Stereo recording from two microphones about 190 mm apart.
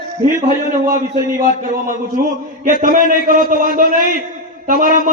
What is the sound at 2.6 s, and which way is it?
A man's voice, 45° right (ahead or behind).